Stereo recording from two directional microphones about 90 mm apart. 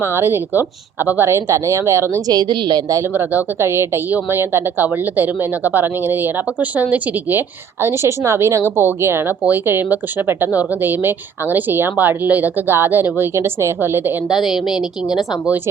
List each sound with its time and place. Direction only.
0.0 s a woman's voice: 25° right (ahead or behind)
2.2 s a woman's voice: 50° right (ahead or behind)
3.1 s a woman's voice: 25° right (ahead or behind)
14.3 s a woman's voice: 5° right (ahead or behind)